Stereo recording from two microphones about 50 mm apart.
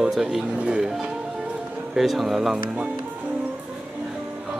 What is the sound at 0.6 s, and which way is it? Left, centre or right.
Speech, centre.